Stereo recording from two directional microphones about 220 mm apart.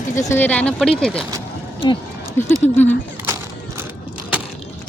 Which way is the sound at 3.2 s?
10° right (ahead or behind).